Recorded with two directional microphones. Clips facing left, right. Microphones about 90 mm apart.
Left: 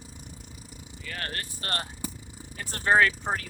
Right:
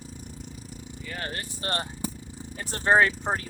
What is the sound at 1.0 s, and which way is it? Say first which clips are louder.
Speech: right 1 dB; 15° right (ahead or behind).